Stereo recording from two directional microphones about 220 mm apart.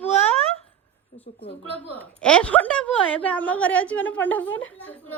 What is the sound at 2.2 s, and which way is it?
Speech, 5° left (ahead or behind).